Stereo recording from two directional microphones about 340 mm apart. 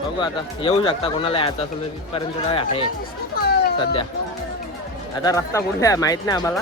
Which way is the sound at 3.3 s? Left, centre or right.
Left.